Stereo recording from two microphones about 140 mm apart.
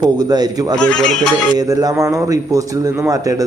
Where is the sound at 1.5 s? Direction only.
25° right (ahead or behind).